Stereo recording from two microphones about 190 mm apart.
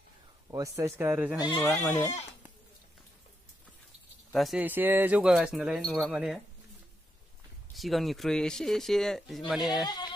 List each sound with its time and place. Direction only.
0.5 s speech: 15° right (ahead or behind)
1.4 s speech: 20° left (ahead or behind)
4.3 s speech: centre (ahead or behind)
7.7 s speech: centre (ahead or behind)
9.8 s music: 20° left (ahead or behind)